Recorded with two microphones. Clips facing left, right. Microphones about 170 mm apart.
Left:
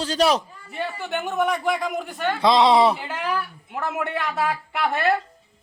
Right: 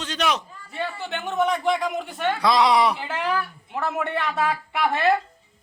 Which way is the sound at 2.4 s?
25° left (ahead or behind).